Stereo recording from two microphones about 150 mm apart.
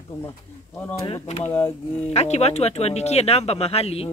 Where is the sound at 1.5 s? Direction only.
15° left (ahead or behind).